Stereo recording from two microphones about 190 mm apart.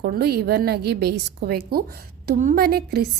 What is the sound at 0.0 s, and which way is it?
A woman's voice, 55° right (ahead or behind).